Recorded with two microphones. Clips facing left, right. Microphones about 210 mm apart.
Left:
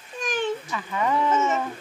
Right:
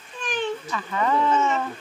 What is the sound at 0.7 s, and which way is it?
Speech, 10° left (ahead or behind).